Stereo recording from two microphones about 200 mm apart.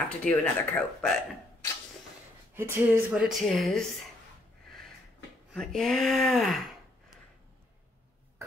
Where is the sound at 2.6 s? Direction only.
10° right (ahead or behind).